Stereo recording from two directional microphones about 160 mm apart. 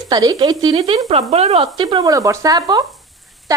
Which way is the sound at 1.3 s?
45° right (ahead or behind).